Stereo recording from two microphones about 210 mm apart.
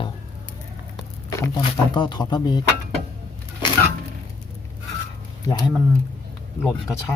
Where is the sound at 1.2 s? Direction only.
15° left (ahead or behind).